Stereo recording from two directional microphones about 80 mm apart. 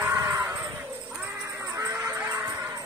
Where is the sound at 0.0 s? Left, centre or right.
Right.